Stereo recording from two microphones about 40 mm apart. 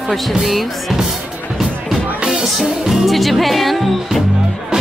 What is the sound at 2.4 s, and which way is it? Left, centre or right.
Music, centre.